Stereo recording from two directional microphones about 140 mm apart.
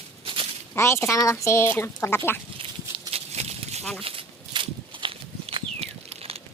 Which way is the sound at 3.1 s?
50° right (ahead or behind).